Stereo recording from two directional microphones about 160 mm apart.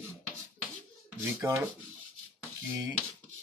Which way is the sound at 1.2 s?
15° right (ahead or behind).